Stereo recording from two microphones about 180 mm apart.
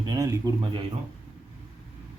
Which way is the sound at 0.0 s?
20° right (ahead or behind).